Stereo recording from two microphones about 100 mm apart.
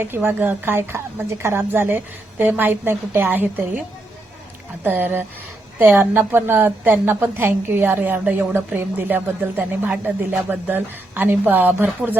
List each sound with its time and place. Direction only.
0.0 s a woman's voice: 20° right (ahead or behind)